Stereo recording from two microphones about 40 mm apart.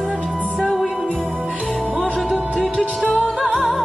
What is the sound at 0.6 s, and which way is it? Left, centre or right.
Music, centre.